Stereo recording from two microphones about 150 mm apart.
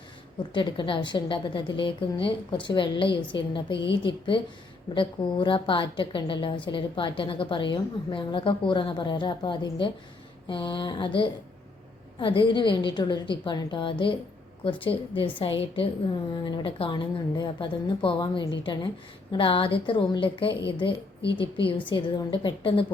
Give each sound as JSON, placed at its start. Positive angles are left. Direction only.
{"t": 0.5, "sound": "a woman's voice", "side_deg": 30}